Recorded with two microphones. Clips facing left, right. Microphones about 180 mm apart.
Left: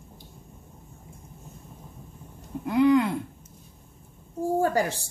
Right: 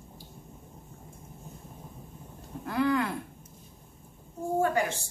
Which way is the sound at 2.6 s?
20° left (ahead or behind).